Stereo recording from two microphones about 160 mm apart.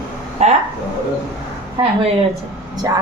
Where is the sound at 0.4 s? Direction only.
45° right (ahead or behind).